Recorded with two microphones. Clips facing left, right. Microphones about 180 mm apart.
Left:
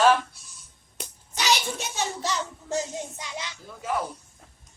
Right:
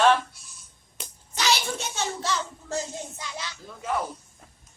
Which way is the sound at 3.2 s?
20° left (ahead or behind).